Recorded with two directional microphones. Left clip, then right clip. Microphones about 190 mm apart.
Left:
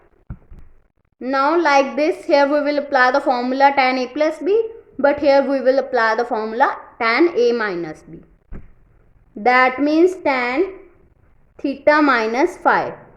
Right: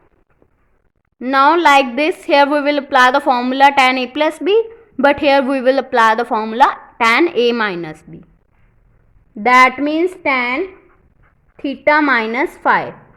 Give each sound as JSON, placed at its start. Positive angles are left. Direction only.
{"t": 1.2, "sound": "a woman's voice", "side_deg": -35}
{"t": 9.4, "sound": "a woman's voice", "side_deg": -20}